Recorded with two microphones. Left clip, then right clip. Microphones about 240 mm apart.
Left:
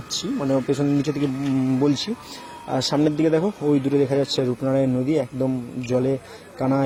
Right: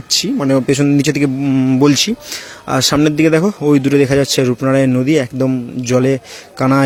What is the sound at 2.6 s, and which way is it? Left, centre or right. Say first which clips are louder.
Speech: right 8 dB; right.